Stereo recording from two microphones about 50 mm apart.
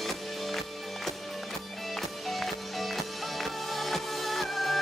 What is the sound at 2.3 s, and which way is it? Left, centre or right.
Music, centre.